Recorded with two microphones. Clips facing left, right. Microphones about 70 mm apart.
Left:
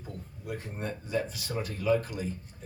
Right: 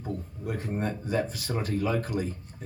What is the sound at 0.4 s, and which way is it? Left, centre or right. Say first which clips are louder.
Speech: right 5 dB; right.